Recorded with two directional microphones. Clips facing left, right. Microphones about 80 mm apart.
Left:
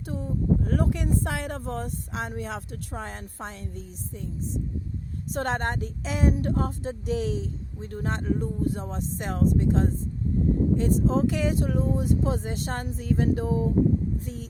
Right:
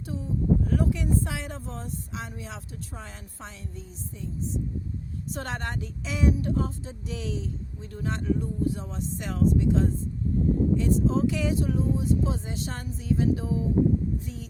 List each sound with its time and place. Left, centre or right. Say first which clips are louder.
0.0 s speech: even; left
5.3 s speech: left 6 dB; left